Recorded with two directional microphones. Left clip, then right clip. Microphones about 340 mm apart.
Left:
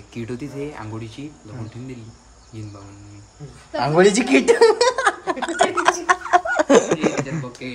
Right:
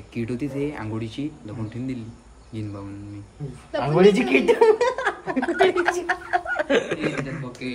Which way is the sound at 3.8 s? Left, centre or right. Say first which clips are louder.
Left 2 dB; left.